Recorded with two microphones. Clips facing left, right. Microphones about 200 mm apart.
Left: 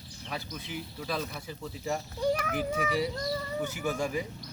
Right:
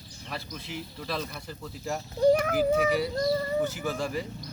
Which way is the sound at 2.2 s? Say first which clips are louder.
Right 9 dB; 40° right (ahead or behind).